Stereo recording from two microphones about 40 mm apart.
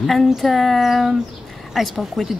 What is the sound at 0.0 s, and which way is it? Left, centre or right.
A woman's voice, centre.